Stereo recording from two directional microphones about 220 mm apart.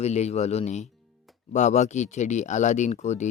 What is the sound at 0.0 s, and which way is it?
Speech, 30° left (ahead or behind).